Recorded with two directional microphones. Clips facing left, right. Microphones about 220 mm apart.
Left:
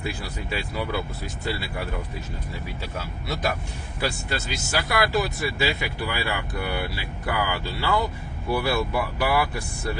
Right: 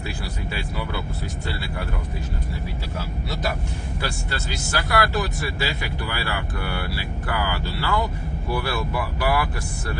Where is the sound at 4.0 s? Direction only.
15° left (ahead or behind).